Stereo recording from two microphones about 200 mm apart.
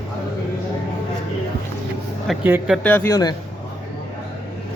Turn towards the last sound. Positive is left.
turn(degrees=20)  # may be behind; listen again after turning